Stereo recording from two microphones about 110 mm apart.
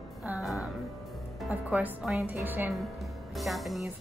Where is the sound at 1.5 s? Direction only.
15° right (ahead or behind).